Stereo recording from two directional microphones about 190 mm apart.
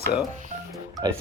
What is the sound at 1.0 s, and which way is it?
Speech, 20° right (ahead or behind).